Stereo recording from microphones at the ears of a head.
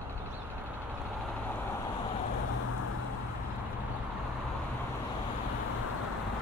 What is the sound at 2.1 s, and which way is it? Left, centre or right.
Vehicle, left.